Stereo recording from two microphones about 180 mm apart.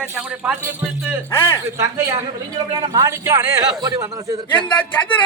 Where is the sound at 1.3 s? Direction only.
15° left (ahead or behind).